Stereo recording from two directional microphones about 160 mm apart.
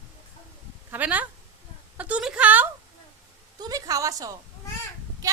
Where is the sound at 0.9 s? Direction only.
10° right (ahead or behind).